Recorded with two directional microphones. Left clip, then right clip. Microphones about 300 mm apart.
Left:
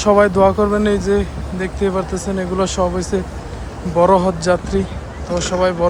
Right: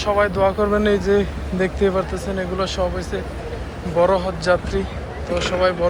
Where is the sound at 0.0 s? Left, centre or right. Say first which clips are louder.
Left 6 dB; left.